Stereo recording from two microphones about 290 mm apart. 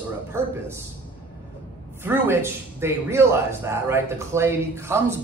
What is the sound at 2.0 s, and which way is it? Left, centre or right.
Speech, centre.